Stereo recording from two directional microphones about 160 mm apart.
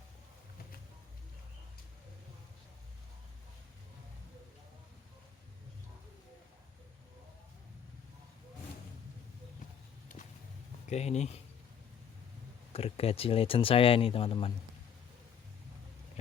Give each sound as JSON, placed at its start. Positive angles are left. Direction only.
{"t": 10.8, "sound": "speech", "side_deg": 45}
{"t": 12.7, "sound": "speech", "side_deg": 35}